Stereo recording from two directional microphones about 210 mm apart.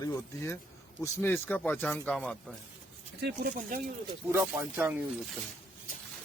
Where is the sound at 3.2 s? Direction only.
50° right (ahead or behind).